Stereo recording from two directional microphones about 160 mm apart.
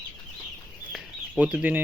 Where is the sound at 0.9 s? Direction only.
Centre (ahead or behind).